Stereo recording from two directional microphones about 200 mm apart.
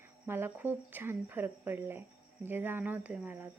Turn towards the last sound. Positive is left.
turn(degrees=-10)  # may be behind; listen again after turning